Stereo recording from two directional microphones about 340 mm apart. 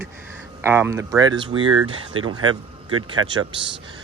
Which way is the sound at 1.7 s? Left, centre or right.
Right.